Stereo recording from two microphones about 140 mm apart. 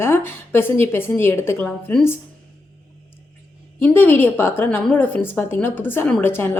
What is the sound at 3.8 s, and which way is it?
A woman's voice, 15° left (ahead or behind).